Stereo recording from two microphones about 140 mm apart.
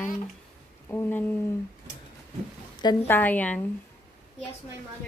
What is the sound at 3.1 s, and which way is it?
Speech, 10° left (ahead or behind).